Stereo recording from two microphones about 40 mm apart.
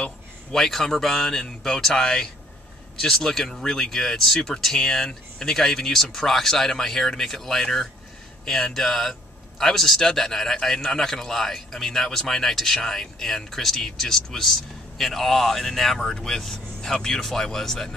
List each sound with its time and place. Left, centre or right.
0.0 s a man's voice: centre